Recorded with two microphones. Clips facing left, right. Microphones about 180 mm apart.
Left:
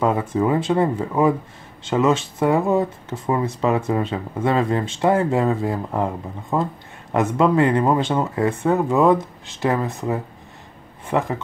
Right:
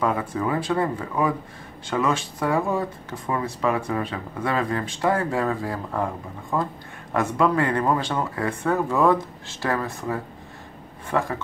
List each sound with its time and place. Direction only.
0.0 s speech: 25° left (ahead or behind)